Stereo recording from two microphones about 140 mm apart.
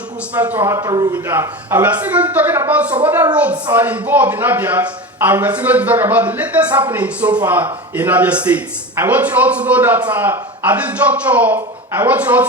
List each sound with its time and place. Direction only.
0.3 s speech: 10° right (ahead or behind)
1.1 s a man's voice: 15° right (ahead or behind)